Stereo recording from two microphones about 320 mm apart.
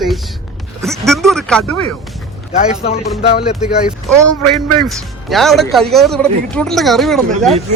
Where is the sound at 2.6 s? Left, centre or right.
Centre.